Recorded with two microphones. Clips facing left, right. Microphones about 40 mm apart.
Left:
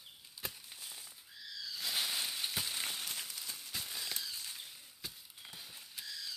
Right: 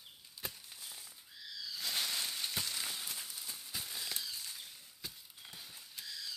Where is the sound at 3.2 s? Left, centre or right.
Centre.